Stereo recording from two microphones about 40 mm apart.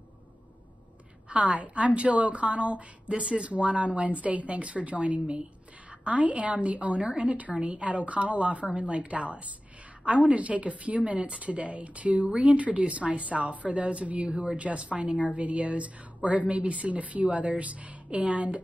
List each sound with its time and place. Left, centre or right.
1.3 s speech: right